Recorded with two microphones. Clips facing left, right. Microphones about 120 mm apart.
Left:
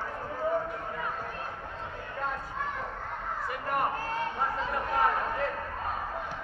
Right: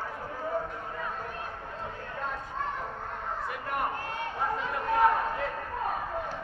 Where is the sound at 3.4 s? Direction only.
Centre (ahead or behind).